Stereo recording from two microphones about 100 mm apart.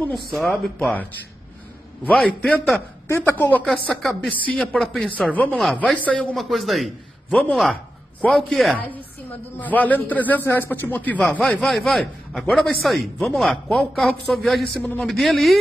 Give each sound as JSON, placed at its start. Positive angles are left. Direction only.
{"t": 0.4, "sound": "speech", "side_deg": 10}
{"t": 2.0, "sound": "a man's voice", "side_deg": 10}
{"t": 3.1, "sound": "a woman's voice", "side_deg": 20}
{"t": 3.6, "sound": "a man's voice", "side_deg": 5}
{"t": 6.3, "sound": "a man's voice", "side_deg": 0}
{"t": 7.2, "sound": "speech", "side_deg": 15}
{"t": 8.3, "sound": "a man's voice", "side_deg": 0}
{"t": 9.6, "sound": "speech", "side_deg": 15}
{"t": 11.5, "sound": "a man's voice", "side_deg": 0}